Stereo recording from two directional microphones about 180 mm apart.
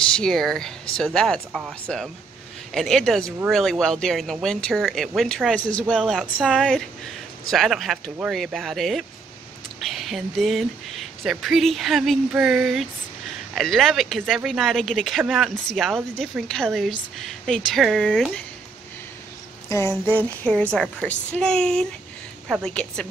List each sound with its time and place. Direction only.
0.0 s speech: 5° left (ahead or behind)
19.7 s speech: 15° left (ahead or behind)